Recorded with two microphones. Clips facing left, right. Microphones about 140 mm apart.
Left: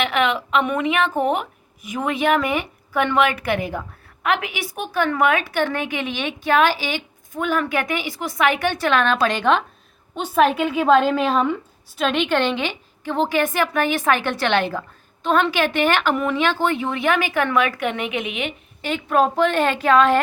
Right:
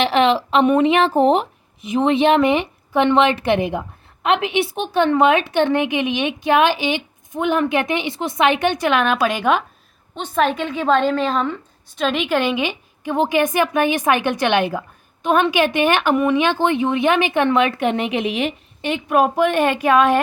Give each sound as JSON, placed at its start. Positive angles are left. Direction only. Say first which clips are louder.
{"t": 0.0, "sound": "a woman's voice", "louder": "right 5 dB", "side_deg": -30}
{"t": 10.2, "sound": "a woman's voice", "louder": "left 2 dB", "side_deg": 5}
{"t": 18.8, "sound": "a woman's voice", "louder": "right 2 dB", "side_deg": -20}